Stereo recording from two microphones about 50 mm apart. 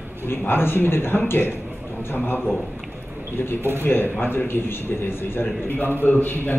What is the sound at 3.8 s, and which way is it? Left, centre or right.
A man's voice, left.